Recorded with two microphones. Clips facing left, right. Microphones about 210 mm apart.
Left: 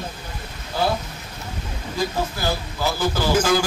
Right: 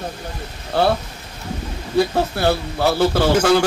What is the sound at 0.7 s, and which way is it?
Speech, 65° right (ahead or behind).